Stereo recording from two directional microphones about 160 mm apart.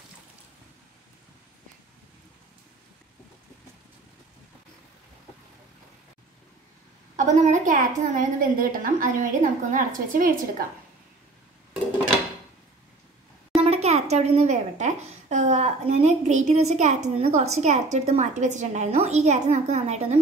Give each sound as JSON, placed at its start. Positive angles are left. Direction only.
{"t": 7.2, "sound": "a woman's voice", "side_deg": -50}
{"t": 13.6, "sound": "a child's voice", "side_deg": -40}